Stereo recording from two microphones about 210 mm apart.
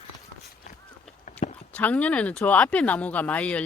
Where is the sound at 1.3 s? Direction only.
35° left (ahead or behind).